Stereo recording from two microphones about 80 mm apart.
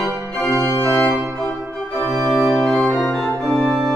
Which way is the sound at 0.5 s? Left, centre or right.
Left.